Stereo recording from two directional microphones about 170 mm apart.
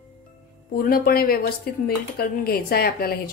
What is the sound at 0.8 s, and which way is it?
A woman's voice, 60° left (ahead or behind).